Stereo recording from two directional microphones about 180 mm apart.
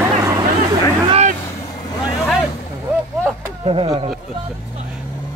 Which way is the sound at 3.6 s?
35° right (ahead or behind).